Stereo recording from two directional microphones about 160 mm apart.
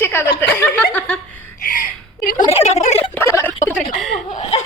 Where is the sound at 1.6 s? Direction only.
55° left (ahead or behind).